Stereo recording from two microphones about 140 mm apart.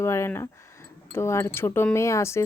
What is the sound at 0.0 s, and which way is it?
A woman's voice, 20° left (ahead or behind).